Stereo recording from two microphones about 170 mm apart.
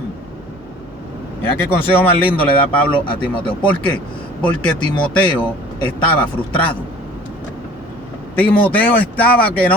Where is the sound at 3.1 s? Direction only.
30° left (ahead or behind).